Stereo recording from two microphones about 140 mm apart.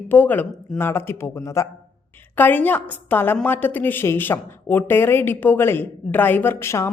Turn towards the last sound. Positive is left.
turn(degrees=20)  # may be behind; listen again after turning